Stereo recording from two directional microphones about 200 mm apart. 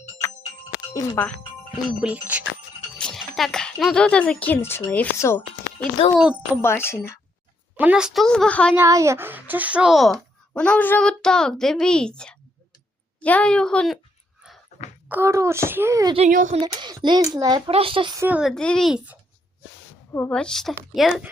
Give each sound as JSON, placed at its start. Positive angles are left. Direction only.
{"t": 0.9, "sound": "speech", "side_deg": 15}
{"t": 1.9, "sound": "a child's voice", "side_deg": -5}
{"t": 6.1, "sound": "speech", "side_deg": -5}
{"t": 6.6, "sound": "speech", "side_deg": 10}
{"t": 7.8, "sound": "speech", "side_deg": -5}
{"t": 8.7, "sound": "speech", "side_deg": -15}
{"t": 15.1, "sound": "a child's voice", "side_deg": -15}
{"t": 16.1, "sound": "speech", "side_deg": -40}
{"t": 16.6, "sound": "a child's voice", "side_deg": -25}
{"t": 18.2, "sound": "speech", "side_deg": -5}
{"t": 20.1, "sound": "speech", "side_deg": 10}